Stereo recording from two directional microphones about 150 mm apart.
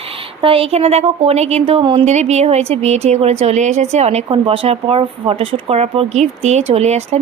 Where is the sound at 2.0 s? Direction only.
50° right (ahead or behind).